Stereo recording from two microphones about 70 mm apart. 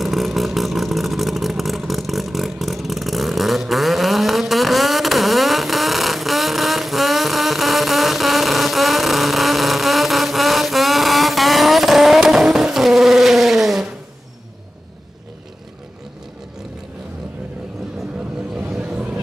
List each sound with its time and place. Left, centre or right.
0.0 s vehicle: centre
18.7 s vehicle: centre